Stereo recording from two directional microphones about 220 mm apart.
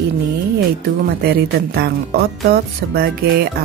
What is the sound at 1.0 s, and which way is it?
Speech, 45° right (ahead or behind).